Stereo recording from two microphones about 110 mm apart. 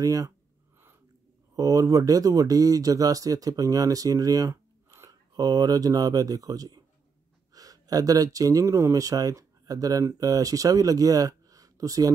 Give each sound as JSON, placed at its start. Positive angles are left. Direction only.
{"t": 0.0, "sound": "speech", "side_deg": -30}
{"t": 1.5, "sound": "speech", "side_deg": -30}